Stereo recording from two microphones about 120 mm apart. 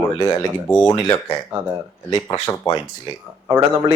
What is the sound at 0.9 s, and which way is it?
Speech, 35° left (ahead or behind).